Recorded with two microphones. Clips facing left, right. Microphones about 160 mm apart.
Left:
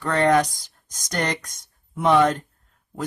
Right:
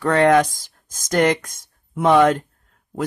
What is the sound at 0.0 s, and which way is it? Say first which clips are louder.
Speech: right 4 dB; 60° right (ahead or behind).